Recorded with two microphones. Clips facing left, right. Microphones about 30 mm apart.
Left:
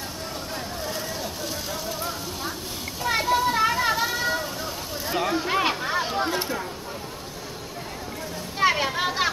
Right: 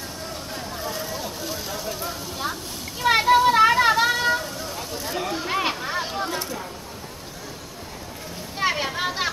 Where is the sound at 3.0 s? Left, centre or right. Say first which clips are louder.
Right 6 dB; right.